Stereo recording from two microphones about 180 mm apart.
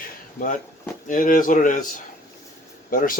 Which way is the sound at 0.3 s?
45° left (ahead or behind).